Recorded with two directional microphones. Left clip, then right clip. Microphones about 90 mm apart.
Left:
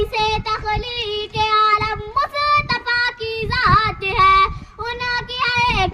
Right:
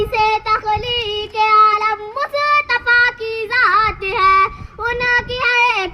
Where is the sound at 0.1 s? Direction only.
30° left (ahead or behind).